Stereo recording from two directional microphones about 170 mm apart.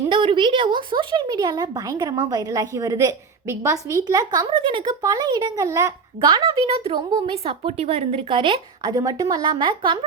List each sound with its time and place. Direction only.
0.1 s speech: 30° right (ahead or behind)